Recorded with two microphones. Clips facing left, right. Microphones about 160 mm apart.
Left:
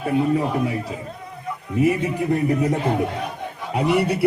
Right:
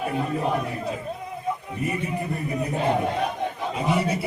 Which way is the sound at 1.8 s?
90° left.